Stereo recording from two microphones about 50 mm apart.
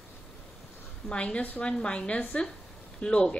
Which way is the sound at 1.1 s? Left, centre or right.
Left.